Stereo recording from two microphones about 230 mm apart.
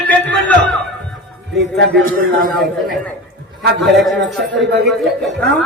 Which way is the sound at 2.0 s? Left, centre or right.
Right.